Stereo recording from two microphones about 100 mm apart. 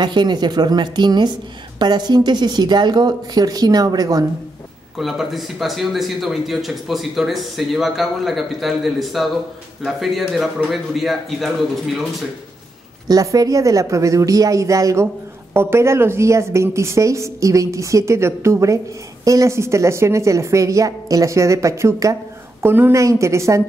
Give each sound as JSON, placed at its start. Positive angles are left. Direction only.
{"t": 0.0, "sound": "speech", "side_deg": -45}
{"t": 4.9, "sound": "a man's voice", "side_deg": 0}
{"t": 13.1, "sound": "a woman's voice", "side_deg": -35}